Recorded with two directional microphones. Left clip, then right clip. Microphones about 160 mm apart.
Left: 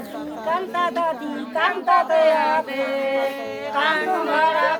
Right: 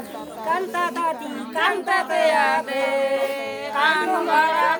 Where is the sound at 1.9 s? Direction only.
80° right.